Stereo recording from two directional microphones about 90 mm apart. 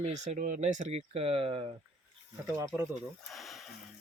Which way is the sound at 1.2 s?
90° right.